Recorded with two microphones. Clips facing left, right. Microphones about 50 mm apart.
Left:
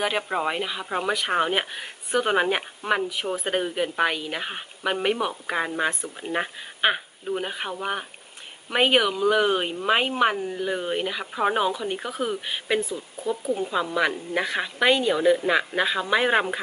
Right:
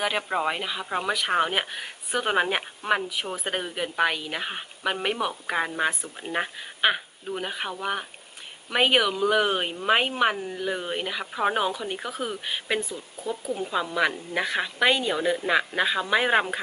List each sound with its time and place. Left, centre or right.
0.0 s speech: centre
12.9 s speech: left
13.6 s speech: centre